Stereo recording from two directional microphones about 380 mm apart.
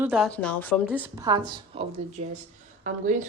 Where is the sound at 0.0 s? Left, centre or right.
Centre.